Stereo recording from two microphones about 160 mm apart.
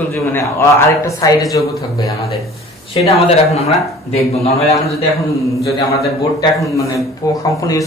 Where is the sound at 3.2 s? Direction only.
40° left (ahead or behind).